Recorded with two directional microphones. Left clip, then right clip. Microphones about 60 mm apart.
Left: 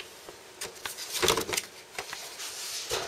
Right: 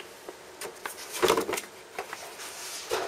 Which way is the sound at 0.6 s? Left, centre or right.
Left.